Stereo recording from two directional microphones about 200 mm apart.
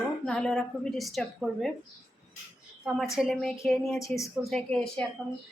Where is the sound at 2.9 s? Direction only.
5° right (ahead or behind).